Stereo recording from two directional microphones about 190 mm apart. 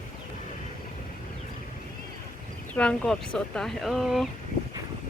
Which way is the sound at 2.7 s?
5° left (ahead or behind).